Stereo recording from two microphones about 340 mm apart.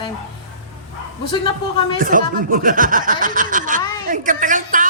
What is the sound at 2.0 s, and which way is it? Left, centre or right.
Speech, right.